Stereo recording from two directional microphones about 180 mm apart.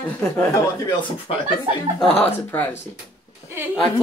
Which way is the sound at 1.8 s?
30° right (ahead or behind).